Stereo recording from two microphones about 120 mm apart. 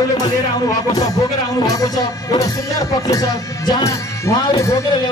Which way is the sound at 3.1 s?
35° left (ahead or behind).